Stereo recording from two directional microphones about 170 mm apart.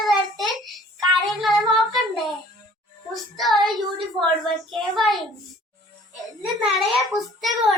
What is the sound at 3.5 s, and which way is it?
Child singing, 25° right (ahead or behind).